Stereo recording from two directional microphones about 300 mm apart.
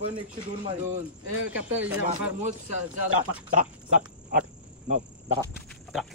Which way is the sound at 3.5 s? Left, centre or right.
Right.